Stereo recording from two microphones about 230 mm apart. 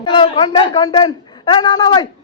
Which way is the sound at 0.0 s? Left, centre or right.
Left.